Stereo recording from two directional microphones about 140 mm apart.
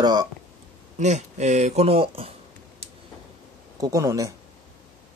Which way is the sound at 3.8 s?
25° right (ahead or behind).